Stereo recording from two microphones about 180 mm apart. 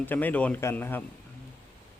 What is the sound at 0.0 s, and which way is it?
Speech, 10° left (ahead or behind).